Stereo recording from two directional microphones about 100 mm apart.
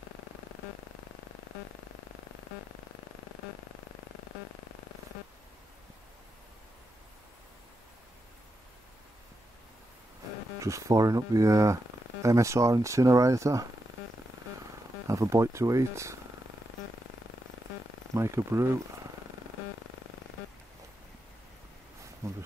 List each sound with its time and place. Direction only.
10.6 s speech: 30° right (ahead or behind)
15.0 s speech: 30° right (ahead or behind)
18.1 s speech: 30° right (ahead or behind)
22.2 s a sound: 30° right (ahead or behind)